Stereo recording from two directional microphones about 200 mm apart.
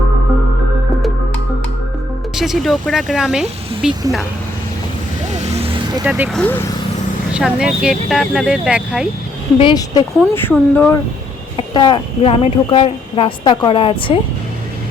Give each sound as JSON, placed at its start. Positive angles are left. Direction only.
{"t": 2.3, "sound": "speech", "side_deg": 0}
{"t": 5.3, "sound": "vehicle", "side_deg": -35}
{"t": 6.1, "sound": "speech", "side_deg": -10}
{"t": 6.3, "sound": "speech", "side_deg": 10}
{"t": 7.3, "sound": "speech", "side_deg": -5}
{"t": 9.6, "sound": "speech", "side_deg": 20}
{"t": 10.3, "sound": "speech", "side_deg": 10}
{"t": 11.5, "sound": "speech", "side_deg": 25}